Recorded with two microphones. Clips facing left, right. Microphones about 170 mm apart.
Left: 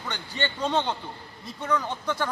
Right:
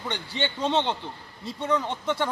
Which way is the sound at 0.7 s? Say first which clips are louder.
Right 1 dB; 25° right (ahead or behind).